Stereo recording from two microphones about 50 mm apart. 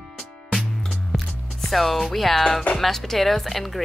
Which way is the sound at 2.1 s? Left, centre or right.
Centre.